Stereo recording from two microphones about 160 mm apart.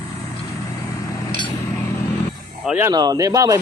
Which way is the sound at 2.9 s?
25° right (ahead or behind).